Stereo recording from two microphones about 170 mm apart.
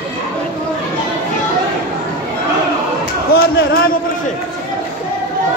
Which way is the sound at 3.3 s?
60° left (ahead or behind).